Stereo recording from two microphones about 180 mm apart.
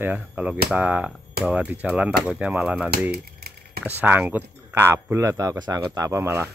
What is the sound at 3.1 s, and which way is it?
Typewriter, 60° right (ahead or behind).